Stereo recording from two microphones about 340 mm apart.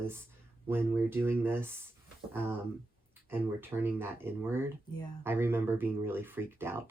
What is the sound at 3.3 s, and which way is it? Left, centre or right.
Speech, centre.